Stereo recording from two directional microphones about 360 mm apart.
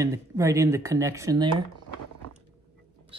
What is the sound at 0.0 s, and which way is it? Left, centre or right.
Speech, centre.